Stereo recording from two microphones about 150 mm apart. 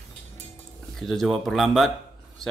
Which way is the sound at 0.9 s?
Centre (ahead or behind).